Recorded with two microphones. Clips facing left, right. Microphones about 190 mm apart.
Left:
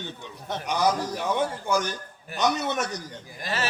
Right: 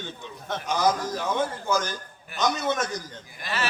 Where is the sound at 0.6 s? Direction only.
65° left (ahead or behind).